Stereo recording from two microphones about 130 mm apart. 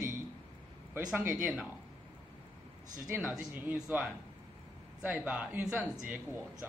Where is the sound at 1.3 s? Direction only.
5° right (ahead or behind).